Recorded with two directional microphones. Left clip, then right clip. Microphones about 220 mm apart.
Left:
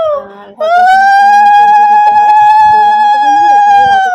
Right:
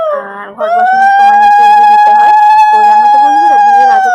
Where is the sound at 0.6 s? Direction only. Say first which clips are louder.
Left 1 dB; 10° left (ahead or behind).